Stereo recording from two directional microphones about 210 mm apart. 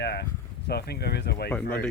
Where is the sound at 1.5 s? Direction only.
5° left (ahead or behind).